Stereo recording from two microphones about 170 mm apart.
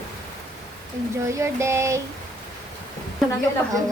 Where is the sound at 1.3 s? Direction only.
15° right (ahead or behind).